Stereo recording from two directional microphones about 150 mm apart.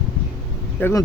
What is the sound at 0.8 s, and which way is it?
Speech, 20° left (ahead or behind).